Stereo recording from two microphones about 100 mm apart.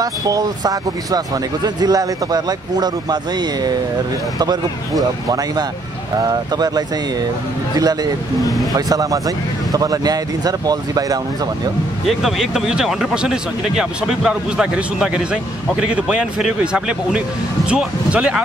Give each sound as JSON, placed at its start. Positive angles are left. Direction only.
{"t": 0.0, "sound": "speech", "side_deg": -40}
{"t": 12.1, "sound": "speech", "side_deg": 0}